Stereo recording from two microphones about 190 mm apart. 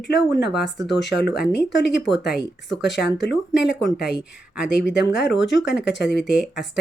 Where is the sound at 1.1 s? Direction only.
60° left (ahead or behind).